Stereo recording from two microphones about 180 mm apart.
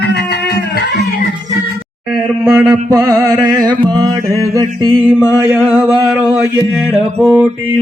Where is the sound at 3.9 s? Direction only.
25° right (ahead or behind).